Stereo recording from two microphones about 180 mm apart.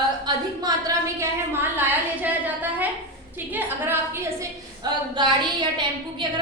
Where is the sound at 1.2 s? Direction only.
10° right (ahead or behind).